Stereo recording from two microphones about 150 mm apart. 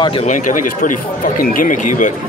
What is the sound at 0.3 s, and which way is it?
Speech, 60° left (ahead or behind).